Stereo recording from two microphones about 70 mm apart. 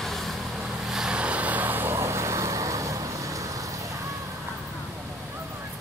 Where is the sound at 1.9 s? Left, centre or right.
Right.